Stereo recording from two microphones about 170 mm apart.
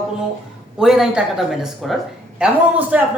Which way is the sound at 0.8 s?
5° right (ahead or behind).